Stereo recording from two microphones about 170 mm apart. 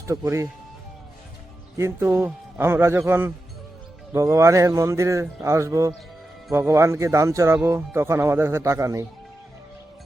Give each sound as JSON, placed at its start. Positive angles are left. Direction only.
{"t": 0.1, "sound": "a man's voice", "side_deg": -15}
{"t": 1.7, "sound": "a man's voice", "side_deg": -15}